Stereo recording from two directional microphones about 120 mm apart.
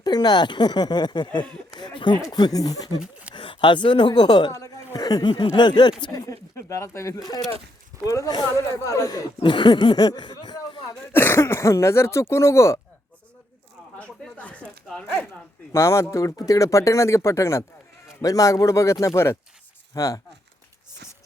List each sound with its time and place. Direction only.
0.0 s speech: 35° left (ahead or behind)
1.7 s a sound: 40° left (ahead or behind)
2.3 s speech: 35° left (ahead or behind)
3.3 s speech: 45° left (ahead or behind)
4.5 s speech: 25° left (ahead or behind)
11.1 s speech: 20° left (ahead or behind)
14.0 s a sound: 10° left (ahead or behind)
14.8 s speech: 10° left (ahead or behind)
15.7 s speech: 25° left (ahead or behind)